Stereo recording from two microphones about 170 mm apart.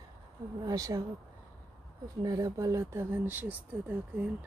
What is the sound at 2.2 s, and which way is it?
Speech, 20° right (ahead or behind).